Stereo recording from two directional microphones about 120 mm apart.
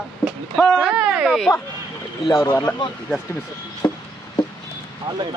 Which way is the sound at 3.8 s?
30° left (ahead or behind).